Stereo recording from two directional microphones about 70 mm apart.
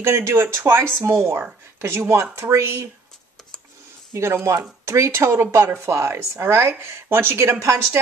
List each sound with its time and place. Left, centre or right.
0.0 s speech: right
4.1 s speech: right